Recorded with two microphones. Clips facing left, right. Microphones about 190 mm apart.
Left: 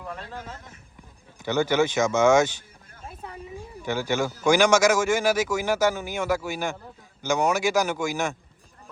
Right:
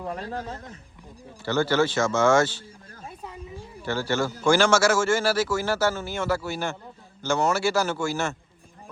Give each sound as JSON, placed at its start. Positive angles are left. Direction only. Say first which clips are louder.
{"t": 0.0, "sound": "a man's voice", "louder": "right 5 dB", "side_deg": -35}
{"t": 1.5, "sound": "speech", "louder": "even", "side_deg": 15}
{"t": 3.8, "sound": "speech", "louder": "even", "side_deg": 15}